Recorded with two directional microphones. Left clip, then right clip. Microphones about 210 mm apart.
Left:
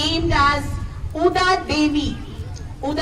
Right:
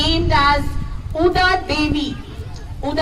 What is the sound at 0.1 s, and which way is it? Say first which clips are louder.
Child singing: right 1 dB; 15° right (ahead or behind).